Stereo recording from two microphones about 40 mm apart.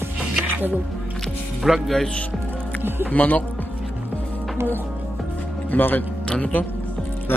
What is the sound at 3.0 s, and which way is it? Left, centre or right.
Speech, left.